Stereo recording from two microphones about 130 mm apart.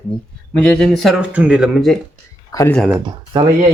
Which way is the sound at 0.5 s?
10° left (ahead or behind).